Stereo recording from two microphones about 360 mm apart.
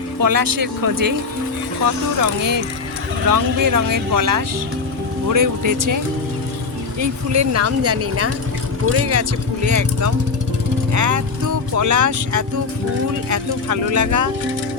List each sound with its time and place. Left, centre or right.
0.2 s speech: right
7.0 s speech: right